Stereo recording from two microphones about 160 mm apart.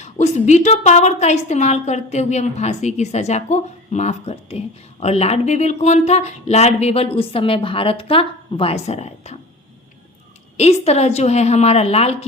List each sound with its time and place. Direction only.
0.0 s a woman's voice: 45° left (ahead or behind)
10.6 s a woman's voice: 40° left (ahead or behind)